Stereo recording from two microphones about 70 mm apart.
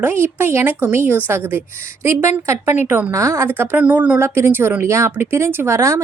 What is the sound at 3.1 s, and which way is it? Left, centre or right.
Speech, right.